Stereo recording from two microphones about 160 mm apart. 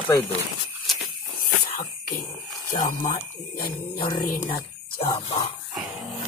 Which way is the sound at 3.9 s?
30° left (ahead or behind).